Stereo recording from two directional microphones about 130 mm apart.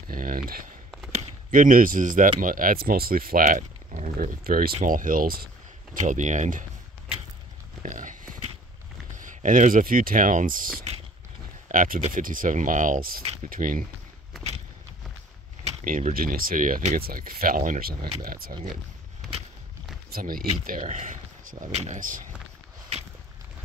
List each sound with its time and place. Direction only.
0.1 s a sound: 90° right
1.1 s speech: 90° right
6.0 s speech: 70° right (ahead or behind)
7.9 s horse: 80° right
9.1 s speech: 80° right
11.7 s speech: 90° right
15.8 s speech: 90° right
20.2 s speech: 90° right
21.6 s speech: 60° right (ahead or behind); by 22.2 s 80° right